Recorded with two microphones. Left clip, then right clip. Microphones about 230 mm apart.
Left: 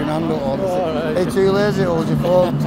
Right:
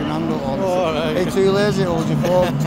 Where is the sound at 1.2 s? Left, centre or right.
Centre.